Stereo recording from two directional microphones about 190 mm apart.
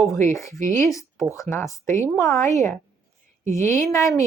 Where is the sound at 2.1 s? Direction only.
Centre (ahead or behind).